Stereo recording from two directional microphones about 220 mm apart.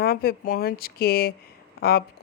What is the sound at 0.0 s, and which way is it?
Speech, 45° left (ahead or behind).